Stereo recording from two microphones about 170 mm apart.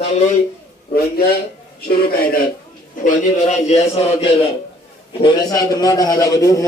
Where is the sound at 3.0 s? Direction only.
50° left (ahead or behind).